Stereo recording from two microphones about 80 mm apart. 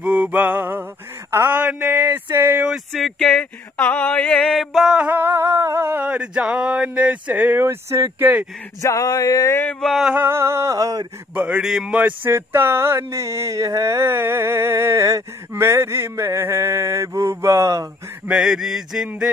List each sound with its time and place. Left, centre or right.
0.0 s music: centre
1.5 s speech: centre
2.7 s a sound: centre
4.6 s music: centre
5.0 s speech: right
5.3 s humming: right
6.0 s speech: centre; by 8.4 s right
8.8 s male singing: left
9.8 s speech: centre
10.1 s a sound: right
11.3 s speech: centre
11.6 s speech: centre
12.3 s a sound: right
18.2 s speech: centre